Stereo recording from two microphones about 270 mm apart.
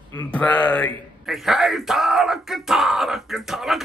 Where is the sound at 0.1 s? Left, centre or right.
Centre.